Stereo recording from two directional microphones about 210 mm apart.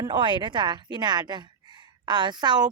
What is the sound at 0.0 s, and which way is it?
A woman's voice, 20° right (ahead or behind).